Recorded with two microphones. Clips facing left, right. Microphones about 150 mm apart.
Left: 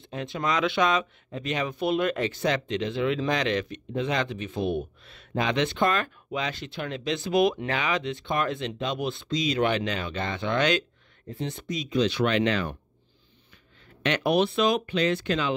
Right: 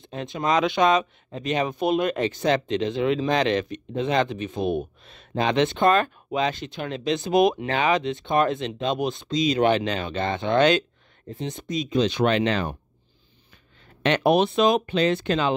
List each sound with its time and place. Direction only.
0.0 s speech: 20° right (ahead or behind)
14.0 s speech: 25° right (ahead or behind)